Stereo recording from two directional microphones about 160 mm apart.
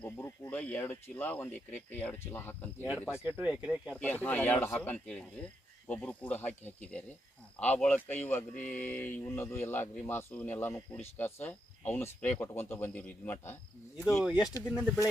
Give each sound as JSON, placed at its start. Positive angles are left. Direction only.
{"t": 0.0, "sound": "speech", "side_deg": 15}
{"t": 3.2, "sound": "speech", "side_deg": -10}
{"t": 4.0, "sound": "speech", "side_deg": 10}
{"t": 8.5, "sound": "speech", "side_deg": 50}
{"t": 8.8, "sound": "speech", "side_deg": 10}
{"t": 14.2, "sound": "speech", "side_deg": -5}